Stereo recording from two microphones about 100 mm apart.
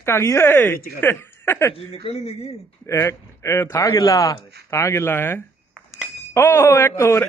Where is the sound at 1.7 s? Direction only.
85° left.